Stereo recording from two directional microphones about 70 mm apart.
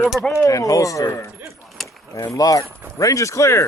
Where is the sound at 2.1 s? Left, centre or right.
Left.